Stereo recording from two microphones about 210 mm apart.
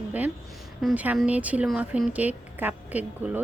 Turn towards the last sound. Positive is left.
turn(degrees=-5)  # may be behind; listen again after turning